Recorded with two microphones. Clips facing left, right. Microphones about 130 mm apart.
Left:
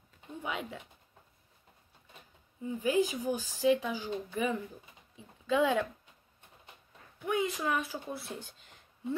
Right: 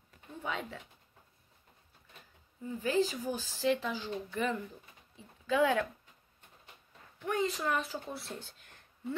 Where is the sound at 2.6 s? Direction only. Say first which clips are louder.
Left 2 dB; 15° left (ahead or behind).